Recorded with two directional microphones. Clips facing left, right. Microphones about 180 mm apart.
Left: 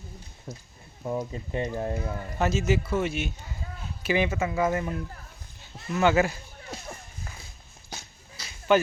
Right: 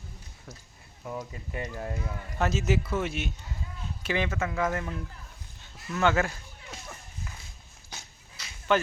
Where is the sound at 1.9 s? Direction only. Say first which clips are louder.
Left 5 dB; 40° left (ahead or behind).